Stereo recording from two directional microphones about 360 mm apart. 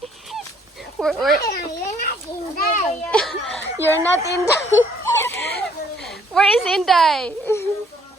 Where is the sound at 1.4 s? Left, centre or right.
Left.